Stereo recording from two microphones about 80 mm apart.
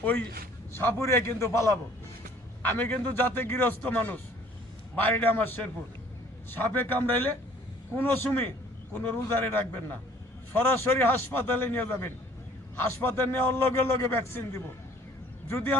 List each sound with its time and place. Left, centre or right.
0.0 s a man's voice: left
2.6 s a man's voice: left
9.5 s a man's voice: left